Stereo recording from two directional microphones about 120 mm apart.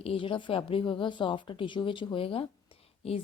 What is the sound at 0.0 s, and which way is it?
A woman's voice, 50° left (ahead or behind).